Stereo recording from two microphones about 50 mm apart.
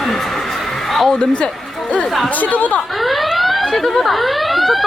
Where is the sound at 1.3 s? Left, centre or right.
Left.